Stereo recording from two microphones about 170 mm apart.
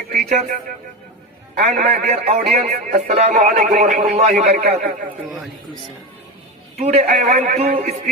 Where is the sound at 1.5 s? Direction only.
40° right (ahead or behind).